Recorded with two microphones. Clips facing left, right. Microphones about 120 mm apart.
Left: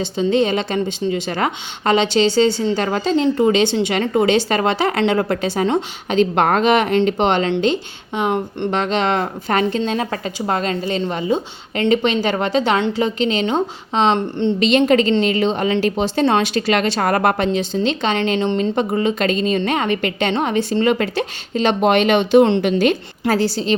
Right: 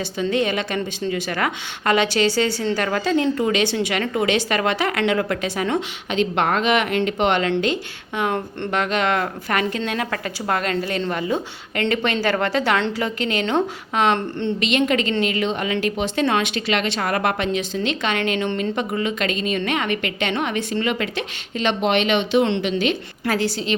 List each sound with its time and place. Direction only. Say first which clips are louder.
0.0 s speech: left 4 dB; 25° left (ahead or behind)
6.1 s a woman's voice: left 5 dB; 40° left (ahead or behind); by 14.5 s 20° left (ahead or behind)
14.6 s a woman's voice: left 6 dB; 35° left (ahead or behind)
23.2 s a woman's voice: left 4 dB; 35° left (ahead or behind)